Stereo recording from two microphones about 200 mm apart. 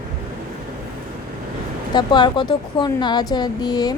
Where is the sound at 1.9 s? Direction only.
20° left (ahead or behind).